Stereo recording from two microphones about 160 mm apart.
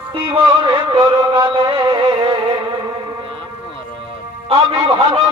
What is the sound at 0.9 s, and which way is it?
Music, 30° right (ahead or behind).